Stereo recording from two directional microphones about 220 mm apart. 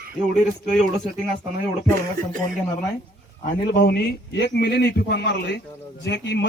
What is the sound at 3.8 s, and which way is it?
Speech, 45° left (ahead or behind).